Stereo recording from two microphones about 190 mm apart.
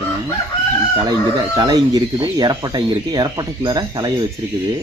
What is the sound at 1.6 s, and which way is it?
Speech, 20° right (ahead or behind).